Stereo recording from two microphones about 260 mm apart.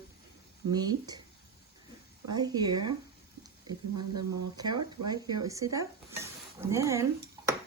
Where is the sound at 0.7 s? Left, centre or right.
Centre.